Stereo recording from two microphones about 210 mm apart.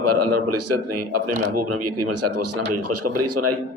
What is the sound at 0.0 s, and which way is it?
Speech, 90° right.